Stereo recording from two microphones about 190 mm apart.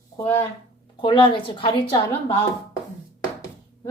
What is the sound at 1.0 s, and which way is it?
Speech, 25° left (ahead or behind).